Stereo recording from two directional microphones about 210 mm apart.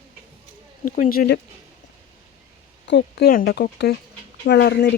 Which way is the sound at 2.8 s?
55° left (ahead or behind).